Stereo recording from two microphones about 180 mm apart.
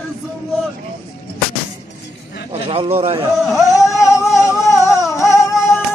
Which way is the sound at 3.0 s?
30° right (ahead or behind).